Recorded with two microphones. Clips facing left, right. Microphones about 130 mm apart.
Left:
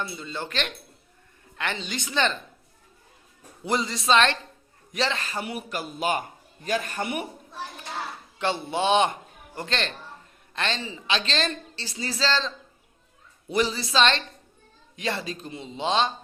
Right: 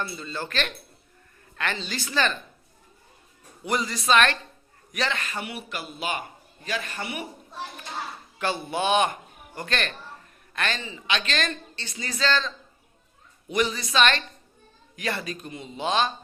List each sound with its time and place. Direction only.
0.0 s a man's voice: 15° left (ahead or behind)
3.6 s a man's voice: 25° left (ahead or behind); by 7.3 s 50° left (ahead or behind)
8.4 s a man's voice: 25° left (ahead or behind)